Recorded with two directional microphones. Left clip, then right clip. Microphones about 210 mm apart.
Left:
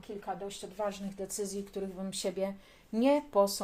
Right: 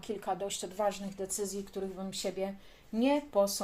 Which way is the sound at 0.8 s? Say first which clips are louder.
Right 3 dB; 15° right (ahead or behind).